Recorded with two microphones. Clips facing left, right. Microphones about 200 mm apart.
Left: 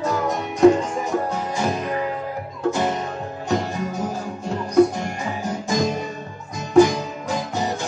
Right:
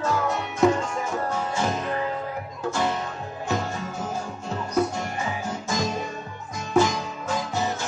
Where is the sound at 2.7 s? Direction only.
20° left (ahead or behind).